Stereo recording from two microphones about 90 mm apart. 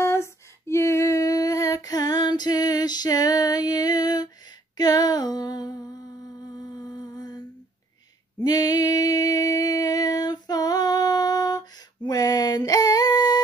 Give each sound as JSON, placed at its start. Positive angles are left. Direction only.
{"t": 0.0, "sound": "female singing", "side_deg": 30}
{"t": 4.7, "sound": "a sound", "side_deg": 50}
{"t": 6.9, "sound": "humming", "side_deg": 50}
{"t": 8.5, "sound": "music", "side_deg": 45}